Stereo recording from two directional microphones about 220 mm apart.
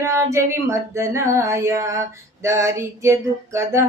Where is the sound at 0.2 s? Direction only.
15° right (ahead or behind).